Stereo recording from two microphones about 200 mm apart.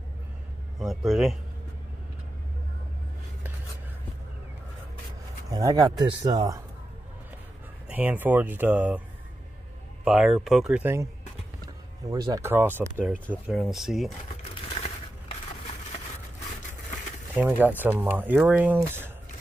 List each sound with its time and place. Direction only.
0.7 s speech: centre (ahead or behind)
5.5 s speech: 20° right (ahead or behind)
7.9 s speech: 10° right (ahead or behind)
10.0 s speech: centre (ahead or behind)
12.1 s speech: 15° right (ahead or behind)
13.1 s speech: 5° left (ahead or behind)
17.4 s speech: 10° right (ahead or behind)